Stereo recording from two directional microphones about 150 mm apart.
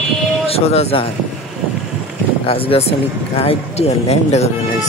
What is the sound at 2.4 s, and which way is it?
Speech, 40° left (ahead or behind).